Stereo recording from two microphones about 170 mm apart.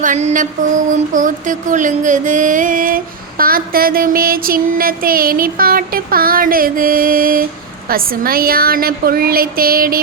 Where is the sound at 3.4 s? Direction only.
60° right (ahead or behind).